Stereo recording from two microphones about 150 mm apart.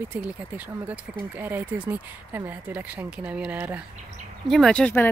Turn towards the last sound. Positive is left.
turn(degrees=10)  # may be behind; listen again after turning